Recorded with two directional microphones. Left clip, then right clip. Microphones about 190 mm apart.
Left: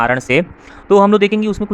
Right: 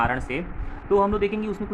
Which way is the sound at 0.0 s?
50° left (ahead or behind).